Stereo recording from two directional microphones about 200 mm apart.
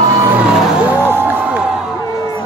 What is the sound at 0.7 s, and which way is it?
Music, 10° right (ahead or behind).